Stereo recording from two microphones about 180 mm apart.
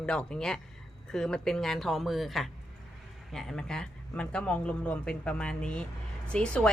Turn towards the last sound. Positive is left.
turn(degrees=5)  # may be behind; listen again after turning